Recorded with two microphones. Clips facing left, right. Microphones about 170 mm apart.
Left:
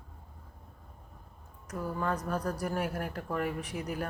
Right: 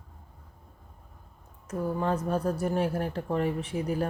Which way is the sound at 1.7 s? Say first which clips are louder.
Right 5 dB; 25° right (ahead or behind).